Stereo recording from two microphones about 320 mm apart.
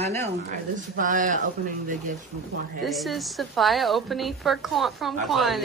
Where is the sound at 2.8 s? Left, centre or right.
Centre.